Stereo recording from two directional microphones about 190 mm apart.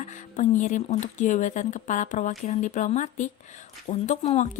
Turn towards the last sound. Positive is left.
turn(degrees=35)  # may be behind; listen again after turning